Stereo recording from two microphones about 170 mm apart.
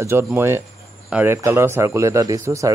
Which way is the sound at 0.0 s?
15° right (ahead or behind).